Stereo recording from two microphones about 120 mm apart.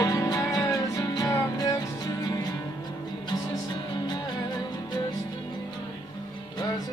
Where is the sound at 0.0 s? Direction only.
30° left (ahead or behind).